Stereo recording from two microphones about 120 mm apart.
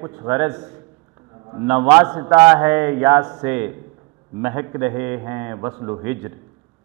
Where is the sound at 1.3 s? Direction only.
30° right (ahead or behind).